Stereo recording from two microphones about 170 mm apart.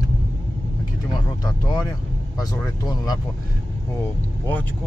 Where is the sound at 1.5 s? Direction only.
25° left (ahead or behind).